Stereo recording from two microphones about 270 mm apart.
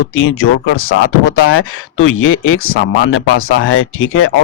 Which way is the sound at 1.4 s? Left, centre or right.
Left.